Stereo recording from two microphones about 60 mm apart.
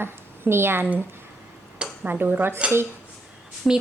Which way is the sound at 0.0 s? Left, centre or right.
Right.